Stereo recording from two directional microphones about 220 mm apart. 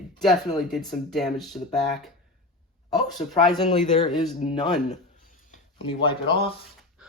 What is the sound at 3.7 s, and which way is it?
Speech, 30° left (ahead or behind).